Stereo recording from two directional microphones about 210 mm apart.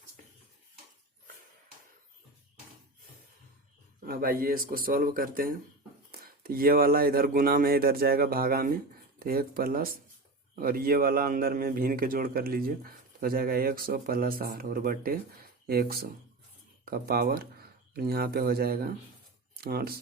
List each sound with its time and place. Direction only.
0.2 s dishes: 35° right (ahead or behind)
4.0 s a man's voice: 45° right (ahead or behind)